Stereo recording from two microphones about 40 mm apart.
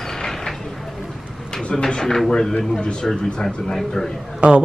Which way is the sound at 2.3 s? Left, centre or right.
Centre.